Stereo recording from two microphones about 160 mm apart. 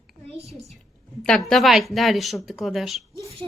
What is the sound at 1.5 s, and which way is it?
Speech, centre (ahead or behind).